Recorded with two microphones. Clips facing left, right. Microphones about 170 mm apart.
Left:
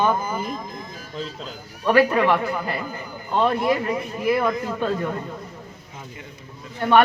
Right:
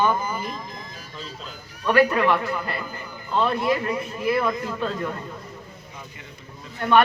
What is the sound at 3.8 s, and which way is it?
Speech, 25° left (ahead or behind).